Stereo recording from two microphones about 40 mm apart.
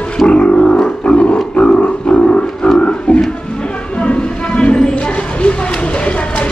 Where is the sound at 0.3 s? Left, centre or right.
Left.